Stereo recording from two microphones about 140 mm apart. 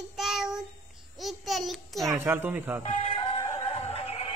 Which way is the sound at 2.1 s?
15° right (ahead or behind).